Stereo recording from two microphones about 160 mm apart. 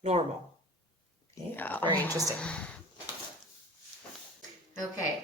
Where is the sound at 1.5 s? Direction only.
10° left (ahead or behind).